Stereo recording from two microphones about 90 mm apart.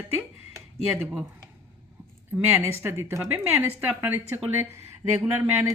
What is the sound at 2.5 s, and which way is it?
A woman's voice, 30° right (ahead or behind).